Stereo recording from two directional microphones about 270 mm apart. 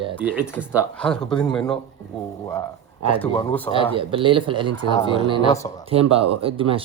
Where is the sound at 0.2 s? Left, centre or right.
Centre.